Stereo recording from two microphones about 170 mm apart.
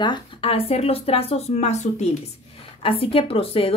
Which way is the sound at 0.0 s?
30° left (ahead or behind).